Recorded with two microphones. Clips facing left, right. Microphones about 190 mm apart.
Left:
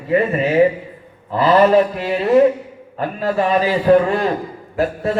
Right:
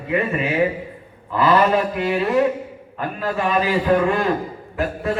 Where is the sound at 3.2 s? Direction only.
35° left (ahead or behind).